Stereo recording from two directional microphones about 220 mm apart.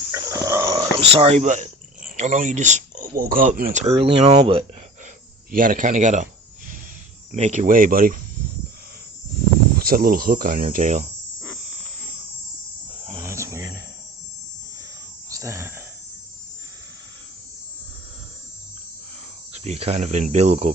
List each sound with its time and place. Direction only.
0.1 s a sound: 15° right (ahead or behind)
0.9 s speech: 25° right (ahead or behind)
5.5 s speech: 40° right (ahead or behind)
7.3 s speech: 30° right (ahead or behind)
9.7 s speech: 40° right (ahead or behind)
13.1 s a sound: 15° right (ahead or behind)
15.3 s wheeze: 15° right (ahead or behind)
19.6 s speech: 30° right (ahead or behind)